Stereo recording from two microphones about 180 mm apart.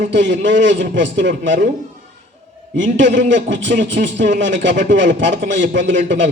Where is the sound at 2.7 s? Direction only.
90° right.